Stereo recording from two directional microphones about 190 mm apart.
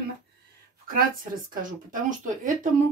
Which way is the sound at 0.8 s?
50° right (ahead or behind).